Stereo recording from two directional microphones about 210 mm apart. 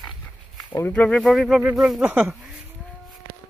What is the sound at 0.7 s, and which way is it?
Speech, 10° left (ahead or behind).